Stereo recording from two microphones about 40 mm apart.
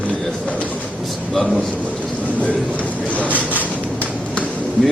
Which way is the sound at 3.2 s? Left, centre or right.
Right.